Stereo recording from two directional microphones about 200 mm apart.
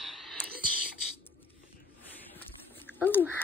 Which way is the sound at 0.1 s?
Centre (ahead or behind).